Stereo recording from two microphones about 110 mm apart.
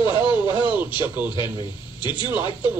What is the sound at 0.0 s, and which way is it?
Radio, 50° left (ahead or behind).